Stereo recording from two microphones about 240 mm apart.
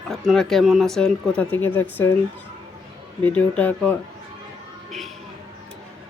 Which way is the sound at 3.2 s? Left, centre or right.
Centre.